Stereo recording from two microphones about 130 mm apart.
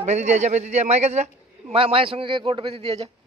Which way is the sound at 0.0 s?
60° right (ahead or behind).